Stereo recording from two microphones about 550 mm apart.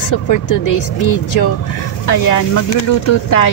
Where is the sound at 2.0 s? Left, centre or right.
Left.